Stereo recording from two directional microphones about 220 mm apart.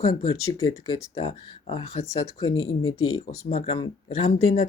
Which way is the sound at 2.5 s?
70° left (ahead or behind).